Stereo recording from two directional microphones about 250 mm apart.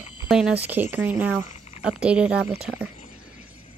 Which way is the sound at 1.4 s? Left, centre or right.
Left.